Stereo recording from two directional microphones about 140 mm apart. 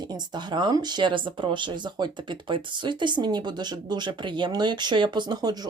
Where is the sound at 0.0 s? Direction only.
30° right (ahead or behind).